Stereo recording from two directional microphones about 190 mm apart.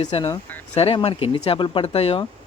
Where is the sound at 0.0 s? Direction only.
25° left (ahead or behind).